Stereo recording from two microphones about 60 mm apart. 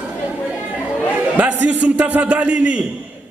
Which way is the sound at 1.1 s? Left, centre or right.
Right.